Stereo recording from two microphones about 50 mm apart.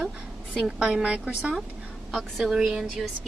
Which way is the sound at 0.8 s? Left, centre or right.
Centre.